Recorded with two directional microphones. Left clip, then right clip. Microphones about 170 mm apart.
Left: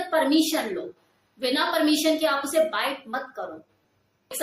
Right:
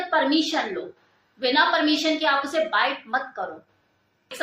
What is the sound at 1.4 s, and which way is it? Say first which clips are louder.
Speech: right 5 dB; 15° left (ahead or behind).